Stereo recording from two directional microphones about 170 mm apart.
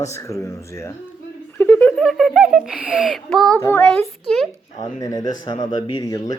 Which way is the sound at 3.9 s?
5° left (ahead or behind).